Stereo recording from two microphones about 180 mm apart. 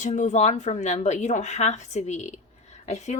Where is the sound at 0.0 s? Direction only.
40° left (ahead or behind).